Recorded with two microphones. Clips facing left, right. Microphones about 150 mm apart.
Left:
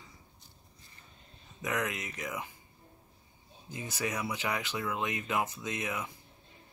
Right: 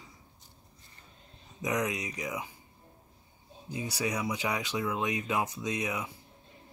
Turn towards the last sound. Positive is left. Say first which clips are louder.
# right 3 dB
turn(degrees=-15)  # may be behind; listen again after turning